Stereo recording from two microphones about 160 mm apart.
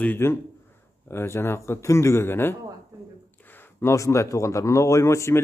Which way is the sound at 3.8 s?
20° left (ahead or behind).